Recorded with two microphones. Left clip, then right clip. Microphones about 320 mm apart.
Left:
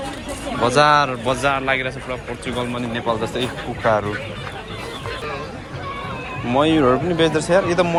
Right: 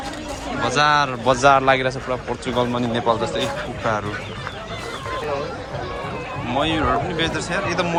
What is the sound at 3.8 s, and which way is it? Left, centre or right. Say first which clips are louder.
Speech: left 5 dB; centre.